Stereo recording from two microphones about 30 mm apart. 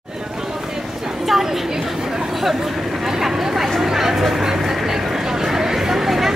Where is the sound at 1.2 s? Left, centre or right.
Centre.